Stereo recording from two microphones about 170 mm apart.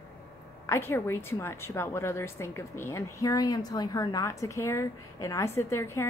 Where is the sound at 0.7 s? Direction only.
15° left (ahead or behind).